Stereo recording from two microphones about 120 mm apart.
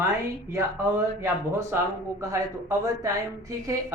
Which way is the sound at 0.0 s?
25° right (ahead or behind).